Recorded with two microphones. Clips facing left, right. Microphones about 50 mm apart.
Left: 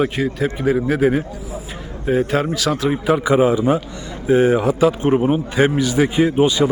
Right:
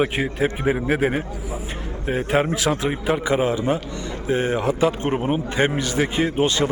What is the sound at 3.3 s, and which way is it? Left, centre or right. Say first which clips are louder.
A man's voice: left 6 dB; centre.